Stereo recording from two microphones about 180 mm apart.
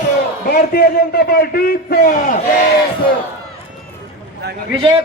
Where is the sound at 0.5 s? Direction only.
60° left (ahead or behind).